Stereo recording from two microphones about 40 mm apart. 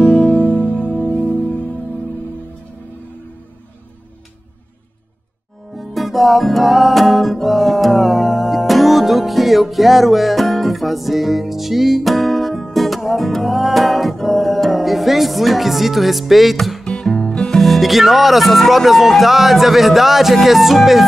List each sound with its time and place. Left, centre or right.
0.0 s music: left
5.8 s music: centre
16.8 s music: left
17.6 s speech: centre